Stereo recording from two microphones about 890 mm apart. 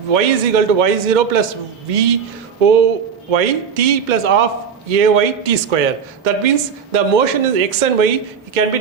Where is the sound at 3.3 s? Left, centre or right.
Right.